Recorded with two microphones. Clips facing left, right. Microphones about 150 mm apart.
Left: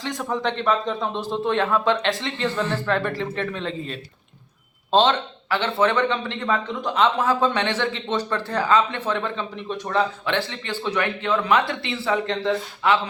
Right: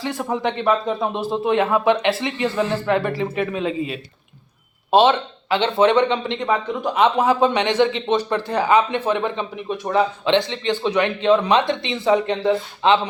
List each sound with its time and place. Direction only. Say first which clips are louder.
0.0 s a man's voice: right 3 dB; 10° right (ahead or behind)
12.8 s a man's voice: right 4 dB; 25° right (ahead or behind)